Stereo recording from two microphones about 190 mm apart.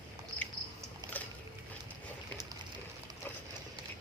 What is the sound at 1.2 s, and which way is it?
Boat, 10° left (ahead or behind).